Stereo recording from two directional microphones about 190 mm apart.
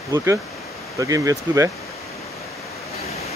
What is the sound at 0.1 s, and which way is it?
Speech, 15° right (ahead or behind).